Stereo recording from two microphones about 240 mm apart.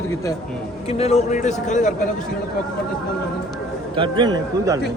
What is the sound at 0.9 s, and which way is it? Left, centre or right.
A man's voice, left.